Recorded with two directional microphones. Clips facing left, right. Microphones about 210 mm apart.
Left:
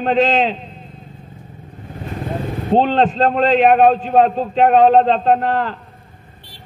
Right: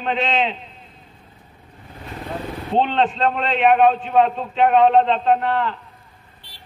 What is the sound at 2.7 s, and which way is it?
A man's voice, 40° left (ahead or behind).